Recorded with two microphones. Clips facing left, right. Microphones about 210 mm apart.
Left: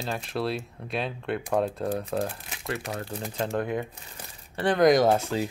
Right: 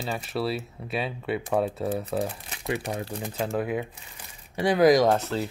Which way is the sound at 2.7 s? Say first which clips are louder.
Right 3 dB; 15° right (ahead or behind).